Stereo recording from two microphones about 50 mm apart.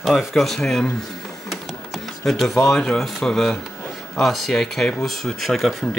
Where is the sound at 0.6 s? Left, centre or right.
Centre.